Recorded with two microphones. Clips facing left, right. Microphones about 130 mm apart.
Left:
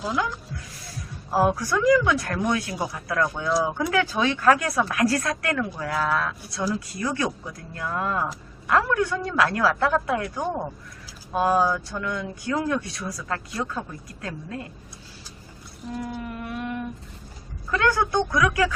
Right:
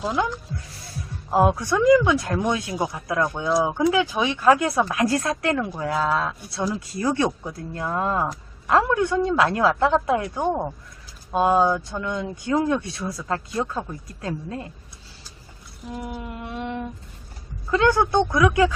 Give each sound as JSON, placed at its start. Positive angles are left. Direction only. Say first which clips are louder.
{"t": 1.3, "sound": "speech", "louder": "right 2 dB", "side_deg": -20}
{"t": 15.9, "sound": "humming", "louder": "left 1 dB", "side_deg": -20}
{"t": 17.7, "sound": "speech", "louder": "right 4 dB", "side_deg": -25}